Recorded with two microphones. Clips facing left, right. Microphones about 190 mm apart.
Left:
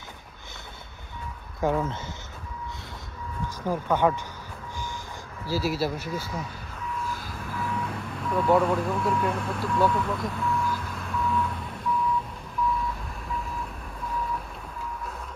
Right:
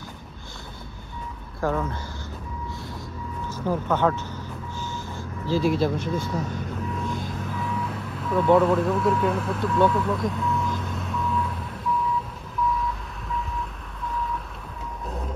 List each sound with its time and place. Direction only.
1.6 s speech: 15° left (ahead or behind)
3.5 s speech: 10° left (ahead or behind)
5.5 s speech: 5° left (ahead or behind)
7.1 s reversing beeps: 5° left (ahead or behind)